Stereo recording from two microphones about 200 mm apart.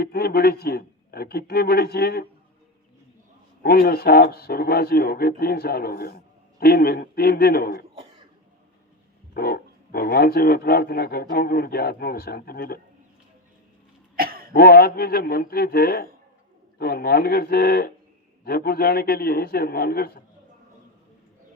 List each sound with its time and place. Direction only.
0.0 s speech: 50° left (ahead or behind)
3.6 s speech: 50° left (ahead or behind)
9.3 s speech: 50° left (ahead or behind)
14.2 s throat clearing: 50° right (ahead or behind)
14.5 s speech: 50° left (ahead or behind)